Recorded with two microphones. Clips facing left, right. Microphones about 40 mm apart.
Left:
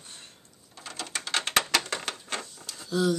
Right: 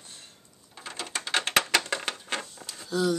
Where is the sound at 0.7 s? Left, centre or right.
Centre.